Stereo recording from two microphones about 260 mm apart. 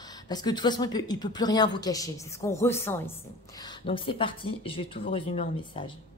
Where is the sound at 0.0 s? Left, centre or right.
Centre.